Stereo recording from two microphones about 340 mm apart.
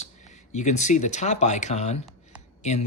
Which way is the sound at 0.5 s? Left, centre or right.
Left.